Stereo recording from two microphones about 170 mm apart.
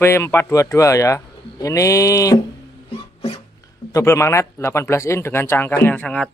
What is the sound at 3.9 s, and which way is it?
A man's voice, 15° left (ahead or behind).